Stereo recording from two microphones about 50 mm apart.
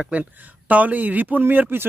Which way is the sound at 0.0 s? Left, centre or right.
Right.